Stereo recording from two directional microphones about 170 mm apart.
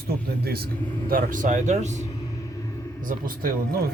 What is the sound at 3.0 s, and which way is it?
Speech, 55° right (ahead or behind).